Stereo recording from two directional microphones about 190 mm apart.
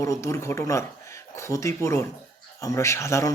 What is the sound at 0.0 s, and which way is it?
A man's voice, 15° left (ahead or behind).